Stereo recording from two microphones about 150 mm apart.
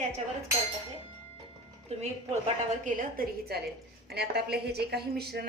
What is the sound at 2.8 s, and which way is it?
Speech, 70° right (ahead or behind).